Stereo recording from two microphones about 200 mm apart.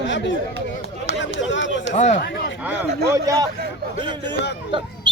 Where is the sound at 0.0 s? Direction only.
65° left (ahead or behind).